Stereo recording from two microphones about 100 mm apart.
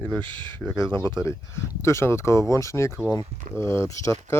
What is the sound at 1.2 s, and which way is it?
Speech, 30° left (ahead or behind).